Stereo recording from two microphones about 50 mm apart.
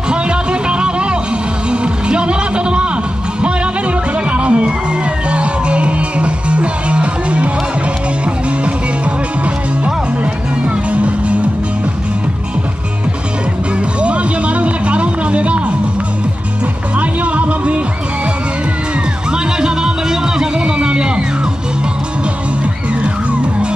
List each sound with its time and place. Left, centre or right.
0.1 s music: right
4.3 s music: right
10.9 s music: right
14.0 s music: right
17.0 s music: right
19.3 s music: centre